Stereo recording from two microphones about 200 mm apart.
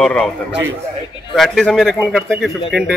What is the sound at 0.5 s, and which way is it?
Speech, 65° right (ahead or behind).